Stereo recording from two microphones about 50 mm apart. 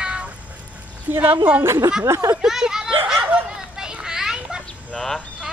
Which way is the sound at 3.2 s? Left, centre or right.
Right.